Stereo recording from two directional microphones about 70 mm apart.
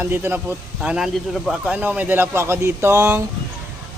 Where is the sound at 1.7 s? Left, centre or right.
Right.